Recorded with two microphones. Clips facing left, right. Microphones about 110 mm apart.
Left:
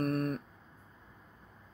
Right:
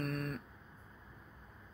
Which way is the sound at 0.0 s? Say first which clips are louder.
Left 7 dB; 45° left (ahead or behind).